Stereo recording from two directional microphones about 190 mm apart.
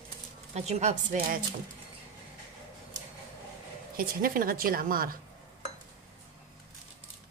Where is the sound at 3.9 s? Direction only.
50° right (ahead or behind).